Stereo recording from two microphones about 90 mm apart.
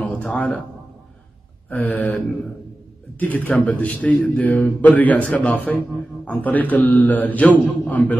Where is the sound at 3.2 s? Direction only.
20° left (ahead or behind).